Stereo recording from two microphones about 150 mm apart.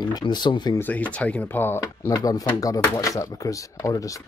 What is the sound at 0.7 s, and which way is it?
Speech, 10° left (ahead or behind).